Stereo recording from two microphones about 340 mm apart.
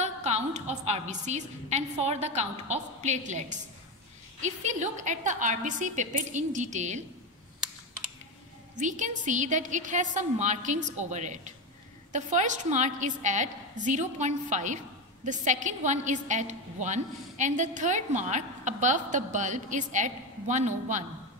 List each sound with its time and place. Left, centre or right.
0.0 s a woman's voice: centre
8.7 s a woman's voice: right